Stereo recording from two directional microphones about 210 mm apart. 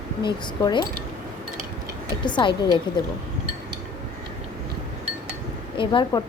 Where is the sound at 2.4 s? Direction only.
25° left (ahead or behind).